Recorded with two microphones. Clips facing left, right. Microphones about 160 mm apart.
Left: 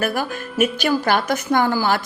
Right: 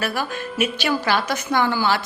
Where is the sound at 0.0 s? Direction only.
50° left (ahead or behind).